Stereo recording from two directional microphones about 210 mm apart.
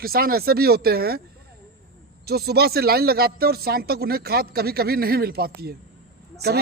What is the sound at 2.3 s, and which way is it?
A man's voice, 50° right (ahead or behind).